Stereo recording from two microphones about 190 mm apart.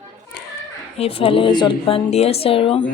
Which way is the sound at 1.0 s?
30° left (ahead or behind).